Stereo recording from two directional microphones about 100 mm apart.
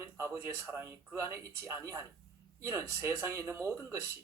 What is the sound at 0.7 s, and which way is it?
A man's voice, 25° right (ahead or behind).